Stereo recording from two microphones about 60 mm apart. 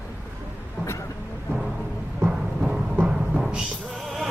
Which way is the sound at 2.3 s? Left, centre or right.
Centre.